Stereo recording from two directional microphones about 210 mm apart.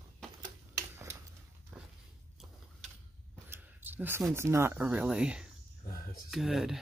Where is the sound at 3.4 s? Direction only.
10° right (ahead or behind).